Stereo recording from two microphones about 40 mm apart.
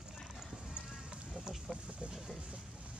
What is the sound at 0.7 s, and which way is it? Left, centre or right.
Run, right.